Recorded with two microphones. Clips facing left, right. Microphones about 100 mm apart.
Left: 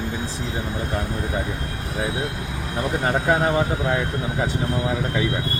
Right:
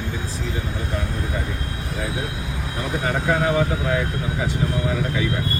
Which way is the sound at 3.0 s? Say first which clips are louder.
Left 1 dB; 35° left (ahead or behind).